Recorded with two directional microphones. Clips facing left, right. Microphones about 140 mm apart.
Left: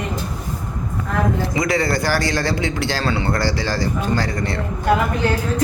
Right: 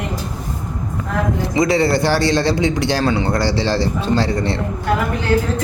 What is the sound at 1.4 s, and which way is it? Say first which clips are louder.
A man's voice: right 4 dB; 25° right (ahead or behind).